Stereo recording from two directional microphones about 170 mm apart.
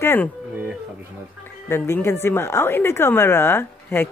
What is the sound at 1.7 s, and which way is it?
Speech, 15° left (ahead or behind).